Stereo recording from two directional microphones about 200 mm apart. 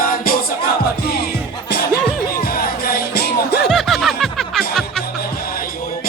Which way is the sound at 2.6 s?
50° left (ahead or behind).